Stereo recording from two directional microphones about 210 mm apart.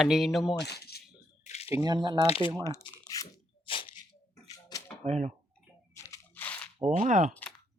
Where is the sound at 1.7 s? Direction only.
20° right (ahead or behind).